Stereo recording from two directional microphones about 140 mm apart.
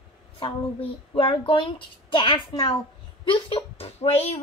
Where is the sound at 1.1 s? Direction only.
40° left (ahead or behind).